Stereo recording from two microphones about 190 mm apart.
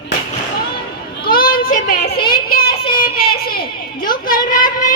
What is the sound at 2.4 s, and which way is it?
Child singing, 55° left (ahead or behind).